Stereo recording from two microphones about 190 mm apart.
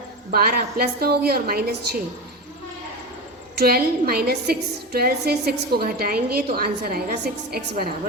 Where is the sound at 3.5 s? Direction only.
55° right (ahead or behind).